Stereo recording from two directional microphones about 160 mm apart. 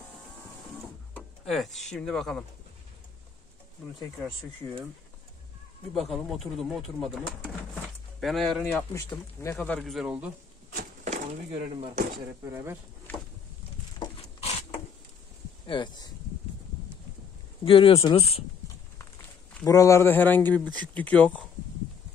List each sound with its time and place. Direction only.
1.1 s speech: centre (ahead or behind)
5.9 s speech: centre (ahead or behind)
8.9 s speech: 15° left (ahead or behind)
9.8 s speech: centre (ahead or behind)
10.8 s a sound: 50° right (ahead or behind)
13.9 s a sound: 30° left (ahead or behind)
15.6 s speech: 30° left (ahead or behind)
17.6 s speech: 35° left (ahead or behind)
19.6 s speech: 20° left (ahead or behind)